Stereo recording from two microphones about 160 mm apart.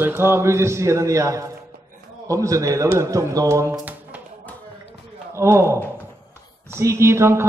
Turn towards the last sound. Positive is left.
turn(degrees=-15)  # may be behind; listen again after turning